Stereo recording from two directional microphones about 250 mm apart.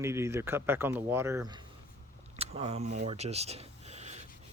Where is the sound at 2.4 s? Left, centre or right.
Right.